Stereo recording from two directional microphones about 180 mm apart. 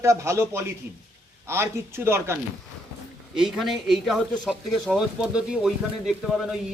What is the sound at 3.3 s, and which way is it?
Speech, centre (ahead or behind).